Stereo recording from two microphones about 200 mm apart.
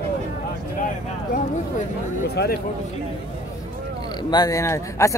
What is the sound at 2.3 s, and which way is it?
Speech, 50° left (ahead or behind).